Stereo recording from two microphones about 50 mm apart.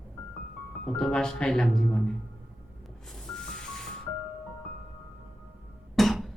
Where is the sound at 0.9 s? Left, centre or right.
Centre.